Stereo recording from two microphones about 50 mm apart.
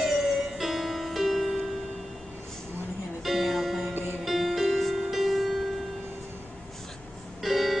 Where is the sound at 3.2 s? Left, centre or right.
Centre.